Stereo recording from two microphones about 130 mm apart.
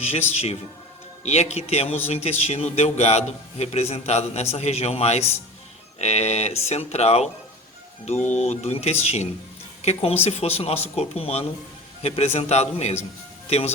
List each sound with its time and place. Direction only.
0.0 s a man's voice: 55° left (ahead or behind)